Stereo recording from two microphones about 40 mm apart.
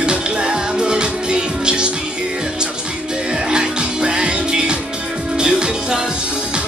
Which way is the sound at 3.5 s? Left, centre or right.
Right.